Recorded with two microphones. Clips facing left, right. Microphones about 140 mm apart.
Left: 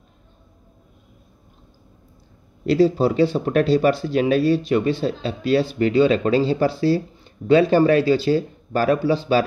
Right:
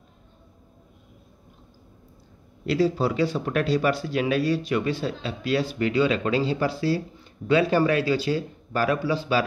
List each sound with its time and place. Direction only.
2.6 s speech: 25° left (ahead or behind)